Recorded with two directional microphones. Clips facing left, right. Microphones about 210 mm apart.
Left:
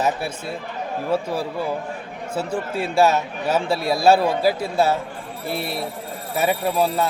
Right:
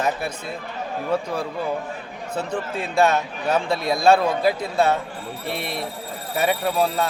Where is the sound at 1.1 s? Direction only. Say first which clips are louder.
Left 1 dB; 5° left (ahead or behind).